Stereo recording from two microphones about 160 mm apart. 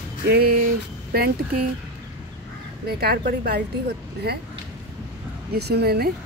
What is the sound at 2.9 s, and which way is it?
A woman's voice, 75° right (ahead or behind).